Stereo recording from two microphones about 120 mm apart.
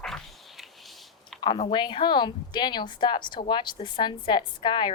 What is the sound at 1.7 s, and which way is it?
A woman's voice, 40° left (ahead or behind).